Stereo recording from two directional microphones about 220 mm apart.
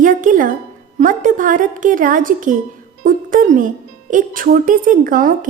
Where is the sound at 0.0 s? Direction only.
35° right (ahead or behind).